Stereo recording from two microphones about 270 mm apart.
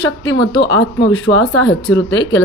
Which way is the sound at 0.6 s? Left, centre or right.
Left.